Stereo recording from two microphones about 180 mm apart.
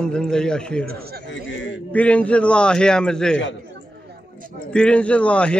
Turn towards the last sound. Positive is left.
turn(degrees=5)  # may be behind; listen again after turning